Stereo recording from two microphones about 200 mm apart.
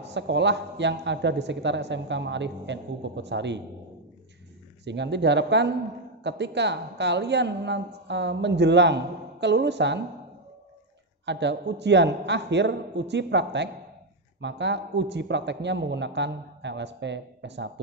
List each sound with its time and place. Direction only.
0.1 s speech: 60° right (ahead or behind)
4.8 s speech: 60° right (ahead or behind)
11.2 s speech: 60° right (ahead or behind)